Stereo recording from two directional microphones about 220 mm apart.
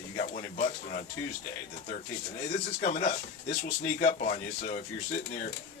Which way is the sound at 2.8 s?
35° left (ahead or behind).